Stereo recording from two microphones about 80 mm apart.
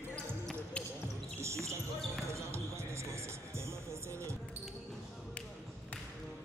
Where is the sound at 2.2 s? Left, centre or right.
Right.